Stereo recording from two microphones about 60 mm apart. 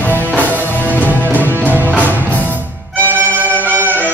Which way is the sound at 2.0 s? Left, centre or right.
Left.